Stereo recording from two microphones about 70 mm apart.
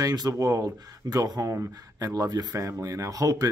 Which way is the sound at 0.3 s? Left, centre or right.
Right.